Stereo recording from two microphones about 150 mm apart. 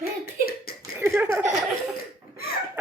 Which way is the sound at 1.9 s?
80° left.